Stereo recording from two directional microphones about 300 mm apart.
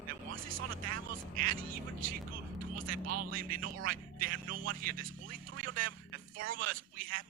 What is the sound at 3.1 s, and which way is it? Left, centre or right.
Speech, right.